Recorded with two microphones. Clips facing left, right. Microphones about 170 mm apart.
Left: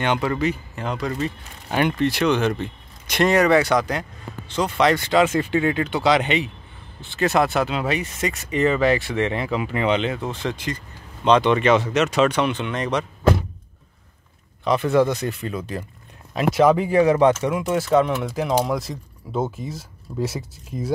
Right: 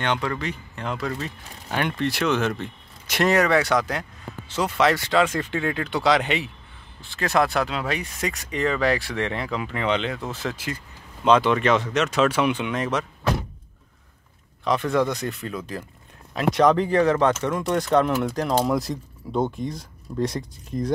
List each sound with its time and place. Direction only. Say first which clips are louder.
0.0 s speech: left 4 dB; 10° left (ahead or behind)
14.6 s speech: left 4 dB; centre (ahead or behind)